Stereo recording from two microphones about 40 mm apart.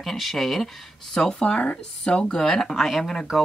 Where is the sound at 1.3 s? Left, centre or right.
Left; by 3.4 s centre.